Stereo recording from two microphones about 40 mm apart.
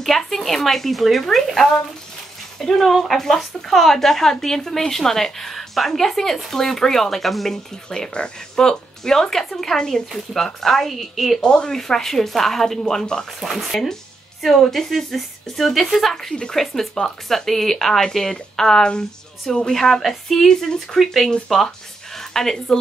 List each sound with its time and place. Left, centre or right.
0.0 s speech: centre
2.8 s a woman's voice: centre
11.4 s speech: left
11.7 s a woman's voice: centre
13.4 s a woman's voice: centre
22.1 s a sound: centre